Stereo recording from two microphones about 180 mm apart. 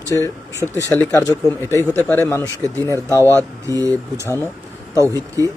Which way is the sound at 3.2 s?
15° right (ahead or behind).